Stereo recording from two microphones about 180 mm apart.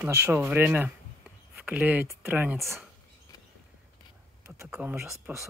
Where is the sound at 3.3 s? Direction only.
20° left (ahead or behind).